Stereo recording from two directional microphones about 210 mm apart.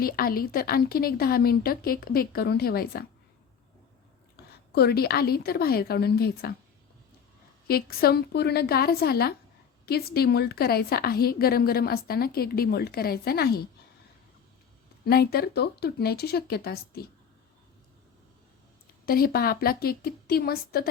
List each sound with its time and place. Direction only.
0.0 s a woman's voice: 45° left (ahead or behind)
4.7 s a woman's voice: 50° left (ahead or behind)
7.7 s a woman's voice: 45° left (ahead or behind)
15.0 s a woman's voice: 45° left (ahead or behind)
19.0 s a woman's voice: 45° left (ahead or behind)